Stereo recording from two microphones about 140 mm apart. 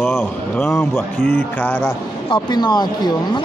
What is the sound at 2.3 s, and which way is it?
Speech, 30° left (ahead or behind).